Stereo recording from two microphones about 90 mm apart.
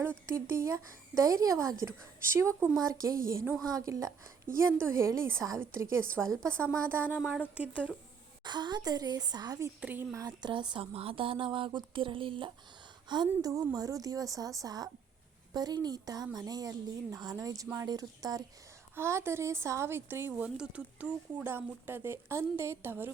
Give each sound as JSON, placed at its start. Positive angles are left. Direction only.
{"t": 0.3, "sound": "a woman's voice", "side_deg": -30}
{"t": 7.2, "sound": "speech", "side_deg": -10}
{"t": 8.4, "sound": "a woman's voice", "side_deg": -55}
{"t": 9.8, "sound": "a woman's voice", "side_deg": -20}
{"t": 10.1, "sound": "a woman's voice", "side_deg": -40}
{"t": 10.4, "sound": "speech", "side_deg": -60}
{"t": 13.4, "sound": "a woman's voice", "side_deg": -40}
{"t": 18.9, "sound": "a woman's voice", "side_deg": -30}
{"t": 20.6, "sound": "a woman's voice", "side_deg": -15}